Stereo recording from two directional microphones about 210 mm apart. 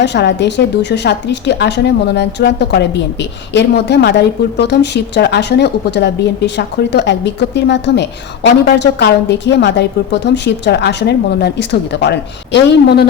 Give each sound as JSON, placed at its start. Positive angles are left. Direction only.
{"t": 0.0, "sound": "a woman's voice", "side_deg": 55}